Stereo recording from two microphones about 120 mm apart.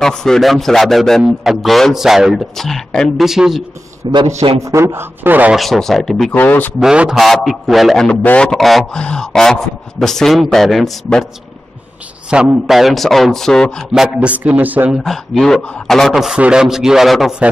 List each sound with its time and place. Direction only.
0.0 s a man's voice: 5° left (ahead or behind)
4.0 s a man's voice: 40° right (ahead or behind)
4.6 s a man's voice: 25° right (ahead or behind)
5.6 s a man's voice: centre (ahead or behind)
6.3 s speech: 15° left (ahead or behind)
6.8 s a man's voice: 5° right (ahead or behind)
12.3 s a man's voice: 10° right (ahead or behind)
15.0 s a man's voice: centre (ahead or behind)